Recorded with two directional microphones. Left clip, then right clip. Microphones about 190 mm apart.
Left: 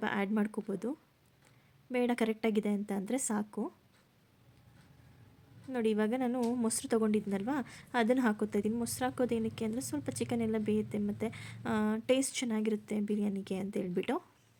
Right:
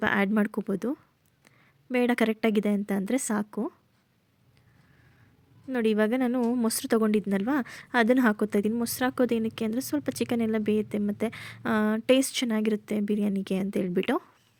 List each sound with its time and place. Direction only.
0.0 s a woman's voice: 35° right (ahead or behind)
5.7 s a woman's voice: 35° right (ahead or behind)